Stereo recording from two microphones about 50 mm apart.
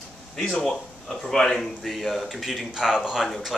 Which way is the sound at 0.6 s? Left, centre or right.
Centre.